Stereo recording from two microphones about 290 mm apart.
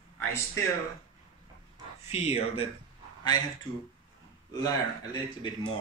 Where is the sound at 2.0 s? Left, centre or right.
Left.